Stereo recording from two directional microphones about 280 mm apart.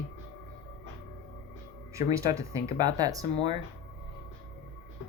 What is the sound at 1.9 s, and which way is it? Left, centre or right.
Speech, centre.